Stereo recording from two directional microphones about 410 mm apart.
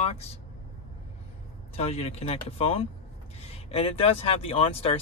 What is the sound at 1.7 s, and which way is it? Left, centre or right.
Speech, centre.